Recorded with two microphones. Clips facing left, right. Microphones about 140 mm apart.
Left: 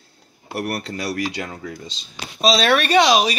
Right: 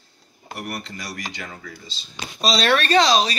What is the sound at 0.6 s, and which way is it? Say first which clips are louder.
Speech: left 7 dB; 65° left (ahead or behind).